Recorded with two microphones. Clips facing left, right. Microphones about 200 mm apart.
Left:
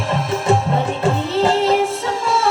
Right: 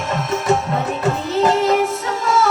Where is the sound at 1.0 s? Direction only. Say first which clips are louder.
Right 1 dB; 30° left (ahead or behind).